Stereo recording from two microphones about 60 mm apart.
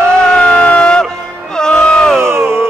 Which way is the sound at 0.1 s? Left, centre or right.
Centre.